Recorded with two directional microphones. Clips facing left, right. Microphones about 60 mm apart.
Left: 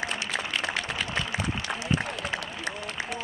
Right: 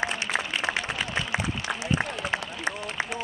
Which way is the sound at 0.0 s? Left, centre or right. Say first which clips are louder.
Right 3 dB; right.